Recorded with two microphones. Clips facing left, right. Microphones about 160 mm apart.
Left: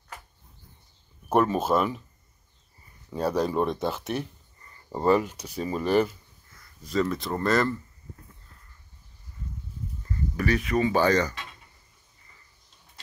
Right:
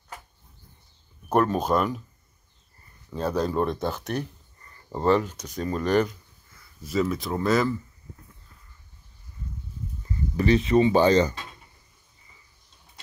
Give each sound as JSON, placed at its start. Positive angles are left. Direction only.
{"t": 1.3, "sound": "speech", "side_deg": 5}
{"t": 3.1, "sound": "speech", "side_deg": 10}
{"t": 10.3, "sound": "speech", "side_deg": -25}